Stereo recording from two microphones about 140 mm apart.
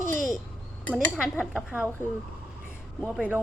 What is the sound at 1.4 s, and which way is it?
Speech, centre (ahead or behind).